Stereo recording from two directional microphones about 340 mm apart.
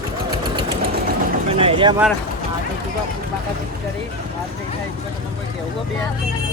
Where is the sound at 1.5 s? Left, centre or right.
Centre.